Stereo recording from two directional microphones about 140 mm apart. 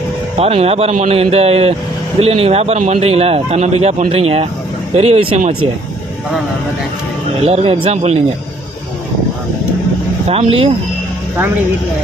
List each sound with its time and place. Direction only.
0.3 s a man's voice: 45° right (ahead or behind)
7.4 s a man's voice: 45° right (ahead or behind)
10.2 s a man's voice: 45° right (ahead or behind)